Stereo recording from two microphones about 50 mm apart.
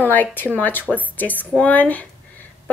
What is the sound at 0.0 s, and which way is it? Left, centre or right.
A woman's voice, left.